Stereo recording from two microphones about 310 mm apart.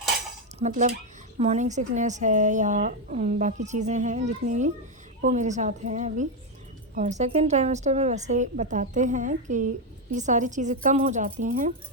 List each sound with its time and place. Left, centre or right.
0.6 s a woman's voice: right